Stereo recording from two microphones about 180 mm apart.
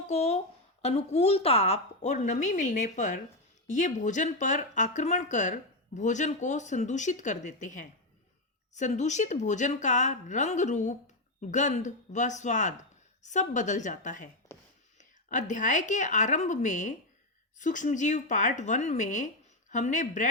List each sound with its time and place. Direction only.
0.1 s a woman's voice: 35° left (ahead or behind)
14.5 s a sound: 15° left (ahead or behind)
14.9 s a woman's voice: 45° left (ahead or behind)